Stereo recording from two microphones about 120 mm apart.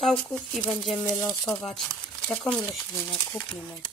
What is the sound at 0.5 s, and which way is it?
Speech, centre (ahead or behind).